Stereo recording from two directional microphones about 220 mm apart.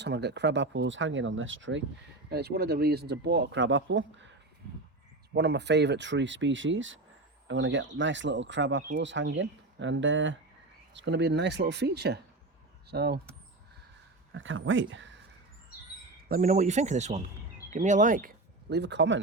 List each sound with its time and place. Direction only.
0.0 s speech: 50° right (ahead or behind)
2.3 s speech: 45° right (ahead or behind)
5.3 s speech: 50° right (ahead or behind)
14.3 s speech: 60° right (ahead or behind)
16.3 s speech: 35° right (ahead or behind); by 19.2 s 55° right (ahead or behind)